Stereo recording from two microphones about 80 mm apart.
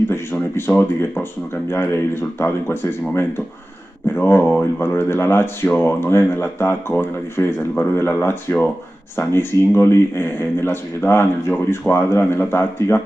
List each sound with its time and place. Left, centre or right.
0.1 s speech: left